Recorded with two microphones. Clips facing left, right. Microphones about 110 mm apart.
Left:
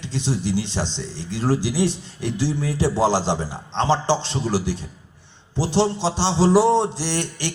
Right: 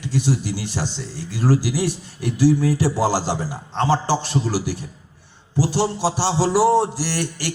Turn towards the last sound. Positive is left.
turn(degrees=20)  # may be behind; listen again after turning